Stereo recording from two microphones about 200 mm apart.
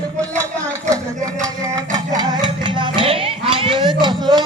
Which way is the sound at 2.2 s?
25° right (ahead or behind).